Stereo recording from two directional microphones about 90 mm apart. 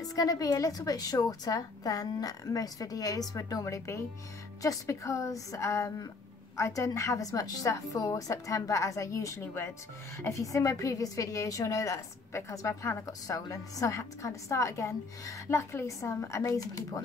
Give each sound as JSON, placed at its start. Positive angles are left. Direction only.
{"t": 0.1, "sound": "a woman's voice", "side_deg": 40}